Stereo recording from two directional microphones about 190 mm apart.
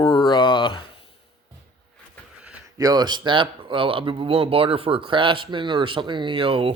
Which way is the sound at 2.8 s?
20° right (ahead or behind).